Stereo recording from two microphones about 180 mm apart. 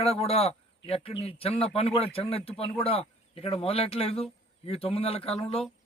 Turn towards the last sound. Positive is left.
turn(degrees=35)  # may be behind; listen again after turning